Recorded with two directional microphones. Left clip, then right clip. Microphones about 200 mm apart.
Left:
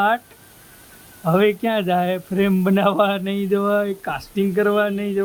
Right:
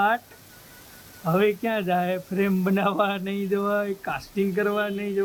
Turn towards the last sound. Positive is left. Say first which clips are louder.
# left 6 dB
turn(degrees=30)  # may be behind; listen again after turning